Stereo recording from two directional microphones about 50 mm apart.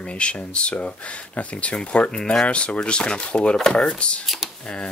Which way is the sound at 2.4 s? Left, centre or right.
Left.